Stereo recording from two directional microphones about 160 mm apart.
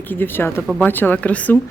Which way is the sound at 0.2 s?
15° left (ahead or behind).